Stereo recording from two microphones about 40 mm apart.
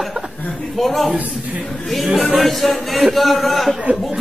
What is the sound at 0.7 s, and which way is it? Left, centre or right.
A woman's voice, centre.